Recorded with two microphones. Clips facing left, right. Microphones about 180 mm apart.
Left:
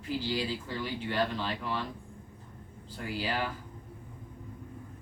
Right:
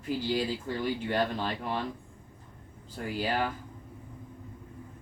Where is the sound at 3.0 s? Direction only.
45° right (ahead or behind).